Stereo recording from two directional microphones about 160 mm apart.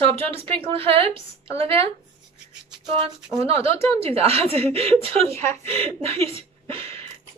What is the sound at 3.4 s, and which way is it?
A woman's voice, 40° right (ahead or behind).